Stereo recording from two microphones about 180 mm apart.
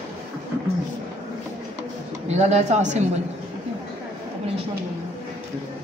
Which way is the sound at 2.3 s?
40° right (ahead or behind).